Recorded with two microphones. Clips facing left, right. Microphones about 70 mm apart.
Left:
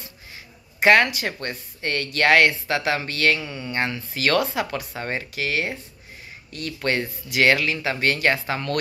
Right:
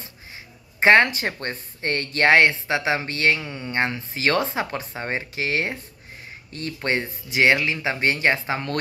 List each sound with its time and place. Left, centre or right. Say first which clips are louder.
0.7 s speech: right 1 dB; right